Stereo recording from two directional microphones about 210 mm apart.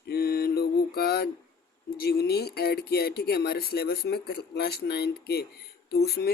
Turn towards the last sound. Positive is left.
turn(degrees=50)  # may be behind; listen again after turning